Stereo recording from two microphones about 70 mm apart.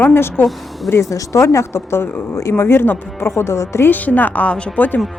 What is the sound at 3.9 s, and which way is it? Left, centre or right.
Speech, left.